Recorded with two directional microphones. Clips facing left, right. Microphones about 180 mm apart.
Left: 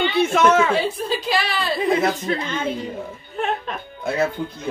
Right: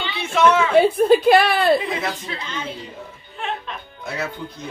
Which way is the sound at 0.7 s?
55° right (ahead or behind).